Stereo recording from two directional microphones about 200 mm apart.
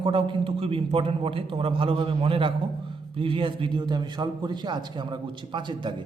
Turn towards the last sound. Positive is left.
turn(degrees=-25)  # may be behind; listen again after turning